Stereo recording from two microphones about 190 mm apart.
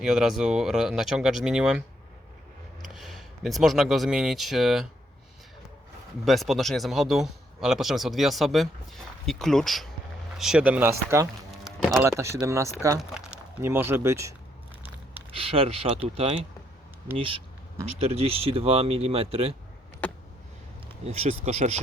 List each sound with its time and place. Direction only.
0.0 s speech: 5° right (ahead or behind)
2.9 s speech: centre (ahead or behind)
6.2 s speech: centre (ahead or behind)
11.6 s a sound: centre (ahead or behind)
11.9 s speech: 15° right (ahead or behind)
15.3 s speech: 30° right (ahead or behind)
20.0 s a sound: 10° left (ahead or behind)
21.0 s speech: 35° right (ahead or behind)